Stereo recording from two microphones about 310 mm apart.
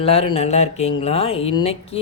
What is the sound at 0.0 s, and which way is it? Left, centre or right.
Speech, centre.